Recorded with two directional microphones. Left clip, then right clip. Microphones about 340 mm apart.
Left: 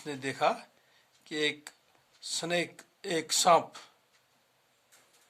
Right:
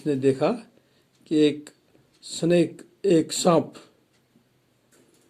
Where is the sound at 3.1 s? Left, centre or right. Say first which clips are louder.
Right 4 dB; centre.